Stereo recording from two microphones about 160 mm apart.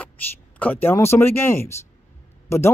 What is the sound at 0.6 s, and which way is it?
A woman's voice, 10° left (ahead or behind).